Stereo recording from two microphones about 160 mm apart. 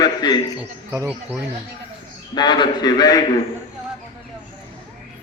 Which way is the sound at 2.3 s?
25° left (ahead or behind).